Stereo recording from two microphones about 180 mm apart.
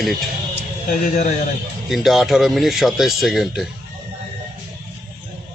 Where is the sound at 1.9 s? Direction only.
Centre (ahead or behind).